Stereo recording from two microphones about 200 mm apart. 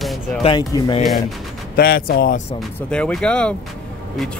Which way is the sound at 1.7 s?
50° left (ahead or behind).